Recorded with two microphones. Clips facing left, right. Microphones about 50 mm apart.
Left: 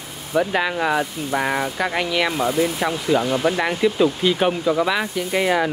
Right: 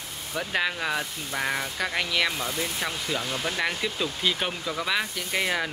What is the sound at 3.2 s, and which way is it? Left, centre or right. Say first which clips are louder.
Speech: left 10 dB; left.